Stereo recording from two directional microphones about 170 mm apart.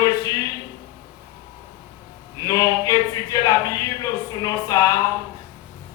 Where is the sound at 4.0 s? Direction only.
20° left (ahead or behind).